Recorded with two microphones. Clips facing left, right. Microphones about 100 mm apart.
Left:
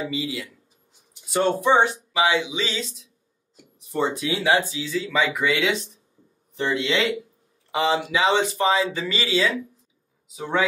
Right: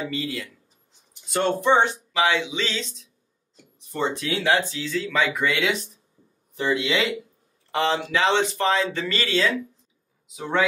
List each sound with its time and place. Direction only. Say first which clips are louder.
0.0 s speech: left 1 dB; 5° left (ahead or behind)